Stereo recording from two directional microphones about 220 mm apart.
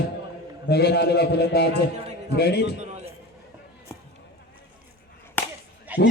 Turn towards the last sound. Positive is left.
turn(degrees=-5)  # may be behind; listen again after turning